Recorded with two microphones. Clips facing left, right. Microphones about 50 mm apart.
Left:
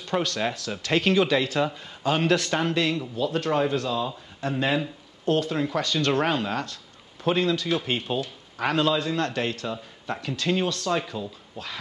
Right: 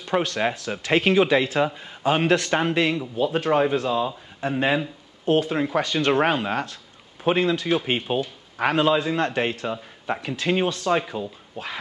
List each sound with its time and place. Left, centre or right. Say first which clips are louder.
0.0 s a man's voice: right 3 dB; centre